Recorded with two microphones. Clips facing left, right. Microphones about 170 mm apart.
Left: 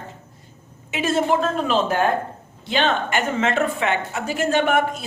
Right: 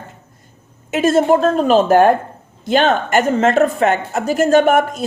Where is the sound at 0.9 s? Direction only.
45° right (ahead or behind).